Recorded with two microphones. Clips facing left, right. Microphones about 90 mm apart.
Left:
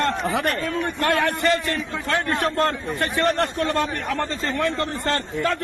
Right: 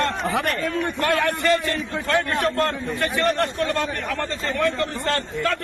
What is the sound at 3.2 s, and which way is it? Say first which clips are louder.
A man's voice: left 1 dB; 40° left (ahead or behind).